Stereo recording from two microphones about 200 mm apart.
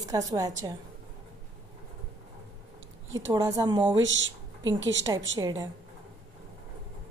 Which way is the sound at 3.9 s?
70° right (ahead or behind).